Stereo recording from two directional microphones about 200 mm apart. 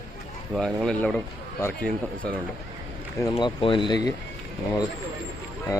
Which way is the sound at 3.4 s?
25° left (ahead or behind).